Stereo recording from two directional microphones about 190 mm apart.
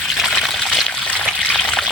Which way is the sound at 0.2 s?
Centre (ahead or behind).